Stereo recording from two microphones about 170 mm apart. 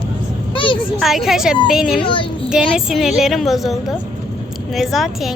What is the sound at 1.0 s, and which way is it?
A woman's voice, centre (ahead or behind).